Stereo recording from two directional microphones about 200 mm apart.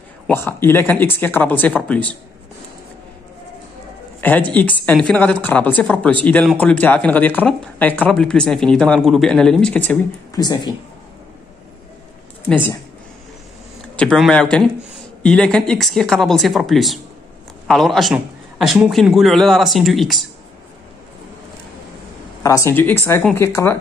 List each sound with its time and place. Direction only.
0.3 s speech: 10° left (ahead or behind)
4.2 s a woman's voice: 10° left (ahead or behind)
10.4 s speech: 20° left (ahead or behind)
12.4 s speech: 10° left (ahead or behind)
13.9 s a man's voice: 5° left (ahead or behind)
22.4 s speech: 15° left (ahead or behind)